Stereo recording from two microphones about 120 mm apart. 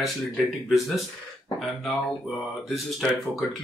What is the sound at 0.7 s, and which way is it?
Speech, centre (ahead or behind).